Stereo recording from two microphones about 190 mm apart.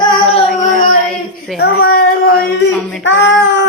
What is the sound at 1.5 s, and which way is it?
Speech, 55° left (ahead or behind).